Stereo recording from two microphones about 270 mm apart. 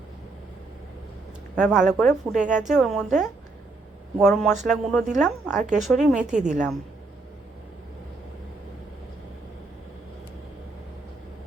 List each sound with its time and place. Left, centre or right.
1.5 s a woman's voice: centre